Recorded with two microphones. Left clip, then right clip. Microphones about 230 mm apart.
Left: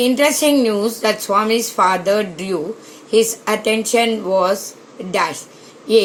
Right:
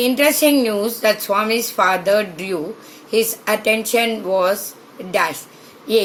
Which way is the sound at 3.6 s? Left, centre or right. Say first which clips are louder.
Left 2 dB; left.